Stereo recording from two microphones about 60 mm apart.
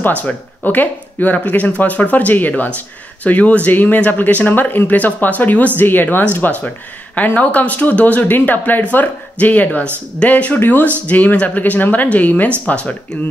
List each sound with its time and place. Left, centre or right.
0.0 s speech: left